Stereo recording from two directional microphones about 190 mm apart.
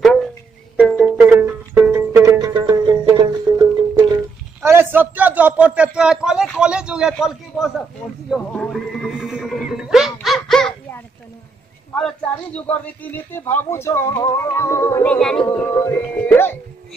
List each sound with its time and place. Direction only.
0.0 s music: centre (ahead or behind)
0.9 s music: 10° right (ahead or behind)
2.3 s music: 25° right (ahead or behind)
4.6 s a man's voice: 10° right (ahead or behind)
10.2 s dog: centre (ahead or behind)
12.0 s speech: 5° left (ahead or behind)
15.1 s music: 5° left (ahead or behind)
15.4 s speech: 10° left (ahead or behind)